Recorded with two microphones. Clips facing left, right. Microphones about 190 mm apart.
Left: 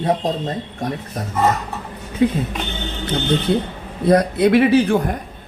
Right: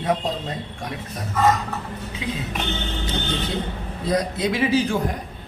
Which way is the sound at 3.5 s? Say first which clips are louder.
Left 7 dB; 60° left (ahead or behind).